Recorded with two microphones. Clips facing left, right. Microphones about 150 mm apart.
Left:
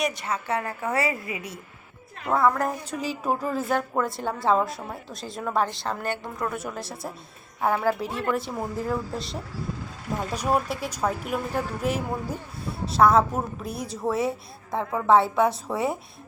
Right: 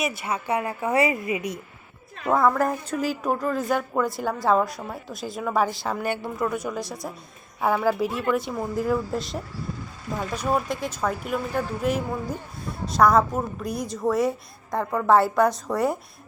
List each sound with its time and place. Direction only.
0.0 s a woman's voice: 5° right (ahead or behind)
2.3 s a woman's voice: centre (ahead or behind)
10.2 s a woman's voice: 10° left (ahead or behind)